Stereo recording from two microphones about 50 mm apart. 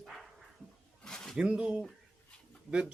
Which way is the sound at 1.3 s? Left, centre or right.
Centre.